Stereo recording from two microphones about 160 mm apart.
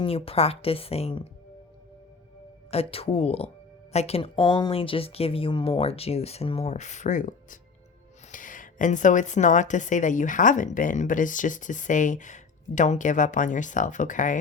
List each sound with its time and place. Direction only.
0.0 s speech: 35° left (ahead or behind)
2.6 s a woman's voice: 40° left (ahead or behind); by 14.3 s 55° left (ahead or behind)